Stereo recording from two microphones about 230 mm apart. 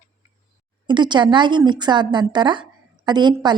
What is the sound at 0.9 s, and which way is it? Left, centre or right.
A woman's voice, centre.